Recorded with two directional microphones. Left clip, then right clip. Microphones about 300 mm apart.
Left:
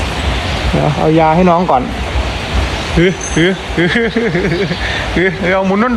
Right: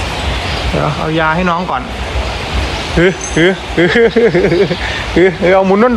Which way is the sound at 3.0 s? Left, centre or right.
Right.